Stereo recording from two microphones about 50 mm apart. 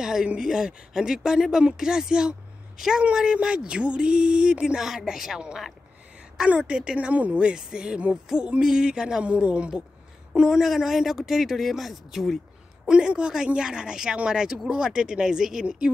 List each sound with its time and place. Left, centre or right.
0.0 s speech: centre
4.7 s speech: centre; by 7.3 s right
7.3 s speech: centre
12.8 s speech: centre